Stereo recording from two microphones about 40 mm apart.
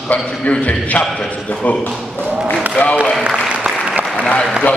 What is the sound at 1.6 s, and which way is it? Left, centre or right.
Speech, left.